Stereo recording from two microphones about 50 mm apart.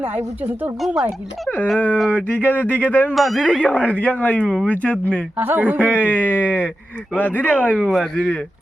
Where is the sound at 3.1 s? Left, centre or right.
Centre.